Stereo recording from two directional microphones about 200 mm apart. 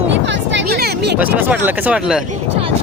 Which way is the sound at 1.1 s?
10° right (ahead or behind).